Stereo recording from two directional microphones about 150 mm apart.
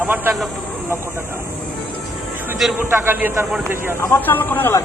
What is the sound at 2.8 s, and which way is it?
Speech, 15° right (ahead or behind).